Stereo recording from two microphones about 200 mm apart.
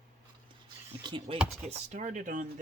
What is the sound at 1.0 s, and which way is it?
Speech, 25° right (ahead or behind).